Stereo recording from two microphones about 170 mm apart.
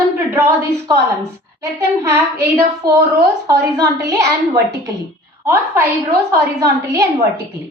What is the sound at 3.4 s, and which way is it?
A woman's voice, 20° right (ahead or behind).